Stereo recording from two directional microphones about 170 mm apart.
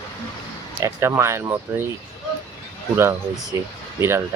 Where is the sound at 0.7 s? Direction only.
15° right (ahead or behind).